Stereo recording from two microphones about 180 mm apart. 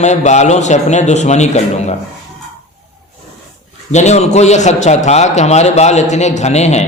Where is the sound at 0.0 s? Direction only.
40° left (ahead or behind).